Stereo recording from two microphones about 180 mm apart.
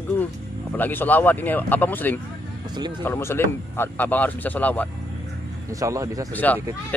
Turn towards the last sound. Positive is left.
turn(degrees=10)  # may be behind; listen again after turning